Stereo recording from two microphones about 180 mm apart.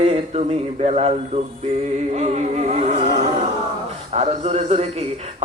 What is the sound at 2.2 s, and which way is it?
Speech, 40° right (ahead or behind).